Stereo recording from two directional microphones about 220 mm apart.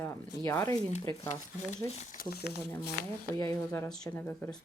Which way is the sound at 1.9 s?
30° left (ahead or behind).